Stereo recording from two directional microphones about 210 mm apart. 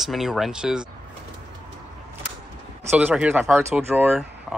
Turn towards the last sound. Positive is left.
turn(degrees=-5)  # may be behind; listen again after turning